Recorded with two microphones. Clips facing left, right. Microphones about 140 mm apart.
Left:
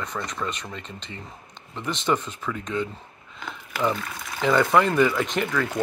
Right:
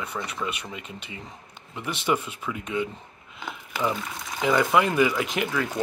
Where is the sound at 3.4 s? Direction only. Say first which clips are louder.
Even; 15° right (ahead or behind).